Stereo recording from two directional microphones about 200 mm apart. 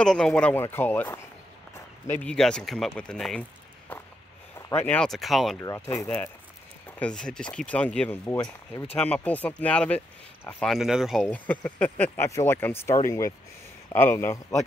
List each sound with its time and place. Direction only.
0.0 s speech: 5° left (ahead or behind)
3.9 s a sound: 10° left (ahead or behind)
4.6 s speech: 15° left (ahead or behind)
5.6 s speech: 15° left (ahead or behind)